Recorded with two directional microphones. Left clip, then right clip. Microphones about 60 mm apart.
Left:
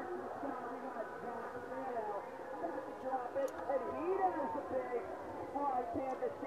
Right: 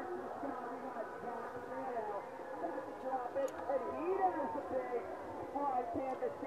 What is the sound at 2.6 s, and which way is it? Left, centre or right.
Train, centre.